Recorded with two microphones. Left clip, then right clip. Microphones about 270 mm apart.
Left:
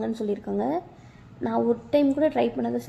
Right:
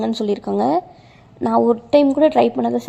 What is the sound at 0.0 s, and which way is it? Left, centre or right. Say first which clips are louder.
A woman's voice: right 8 dB; right.